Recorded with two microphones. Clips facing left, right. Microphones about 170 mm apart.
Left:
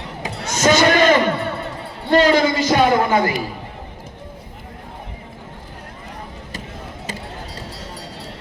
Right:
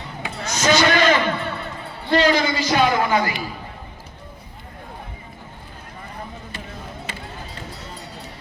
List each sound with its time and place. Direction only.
0.2 s a sound: 45° left (ahead or behind)
1.0 s music: 35° left (ahead or behind)
2.0 s a man's voice: 45° left (ahead or behind)
3.1 s a man's voice: 30° left (ahead or behind)